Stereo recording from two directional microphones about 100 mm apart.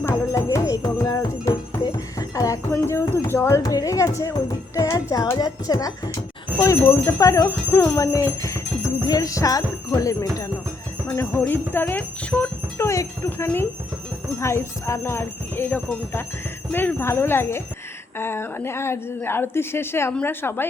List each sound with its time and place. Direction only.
0.0 s music: 30° left (ahead or behind)
5.4 s speech: 40° left (ahead or behind)
7.4 s a woman's voice: 20° left (ahead or behind)
7.9 s speech: 35° left (ahead or behind)
11.3 s speech: 20° left (ahead or behind)
12.8 s a woman's voice: 30° left (ahead or behind)